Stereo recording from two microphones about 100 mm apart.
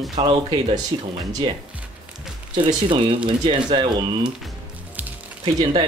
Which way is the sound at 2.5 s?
55° right (ahead or behind).